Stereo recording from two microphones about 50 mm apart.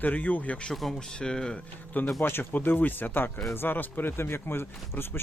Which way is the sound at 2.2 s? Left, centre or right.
Left.